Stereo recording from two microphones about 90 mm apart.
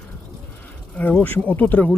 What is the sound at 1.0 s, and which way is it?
Speech, 15° left (ahead or behind).